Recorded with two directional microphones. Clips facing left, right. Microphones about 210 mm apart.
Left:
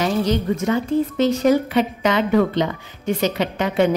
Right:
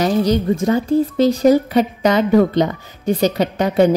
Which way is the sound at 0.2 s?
35° right (ahead or behind).